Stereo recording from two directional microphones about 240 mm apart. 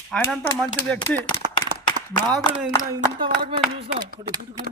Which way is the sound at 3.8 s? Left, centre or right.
Right.